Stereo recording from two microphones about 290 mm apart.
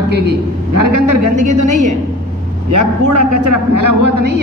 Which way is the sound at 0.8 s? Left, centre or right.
Right.